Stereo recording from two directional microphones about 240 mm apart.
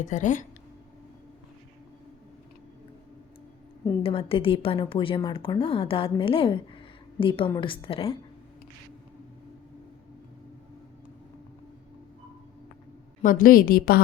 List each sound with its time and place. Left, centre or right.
0.0 s a woman's voice: left
4.0 s a woman's voice: left
13.2 s a woman's voice: left